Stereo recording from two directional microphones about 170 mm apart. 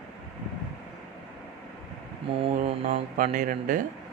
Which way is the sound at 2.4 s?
50° right (ahead or behind).